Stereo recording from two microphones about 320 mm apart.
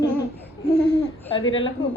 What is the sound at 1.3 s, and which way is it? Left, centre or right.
Speech, centre.